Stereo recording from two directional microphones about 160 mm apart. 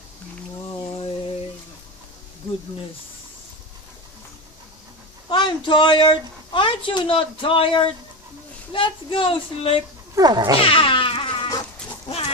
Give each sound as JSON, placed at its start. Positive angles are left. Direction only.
{"t": 0.7, "sound": "a sound", "side_deg": 35}
{"t": 5.3, "sound": "a woman's voice", "side_deg": 30}
{"t": 10.1, "sound": "cat", "side_deg": -25}
{"t": 10.7, "sound": "music", "side_deg": 35}